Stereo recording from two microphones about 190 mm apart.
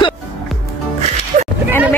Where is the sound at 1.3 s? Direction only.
40° right (ahead or behind).